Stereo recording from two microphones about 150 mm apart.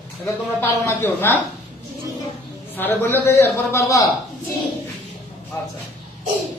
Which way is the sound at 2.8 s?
15° left (ahead or behind).